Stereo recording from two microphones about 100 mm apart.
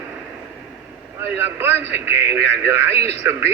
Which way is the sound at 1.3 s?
25° right (ahead or behind).